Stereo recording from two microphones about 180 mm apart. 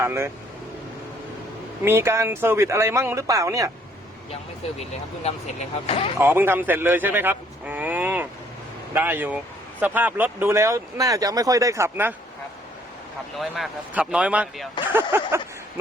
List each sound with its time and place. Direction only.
0.0 s speech: 15° right (ahead or behind)
1.8 s speech: 15° right (ahead or behind)
4.8 s speech: 35° left (ahead or behind)
6.1 s speech: 10° right (ahead or behind)
13.4 s speech: 5° right (ahead or behind)